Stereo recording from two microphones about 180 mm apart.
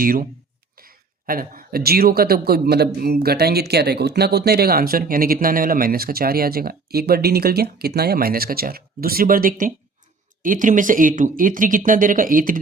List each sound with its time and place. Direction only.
0.0 s speech: 50° right (ahead or behind)